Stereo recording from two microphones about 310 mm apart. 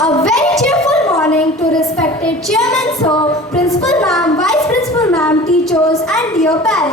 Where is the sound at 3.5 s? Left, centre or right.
Centre.